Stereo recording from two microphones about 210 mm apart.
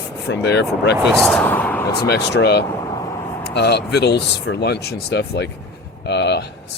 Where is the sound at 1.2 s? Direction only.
5° left (ahead or behind).